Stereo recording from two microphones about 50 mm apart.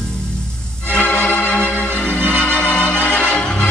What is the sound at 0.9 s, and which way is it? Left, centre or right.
Music, left.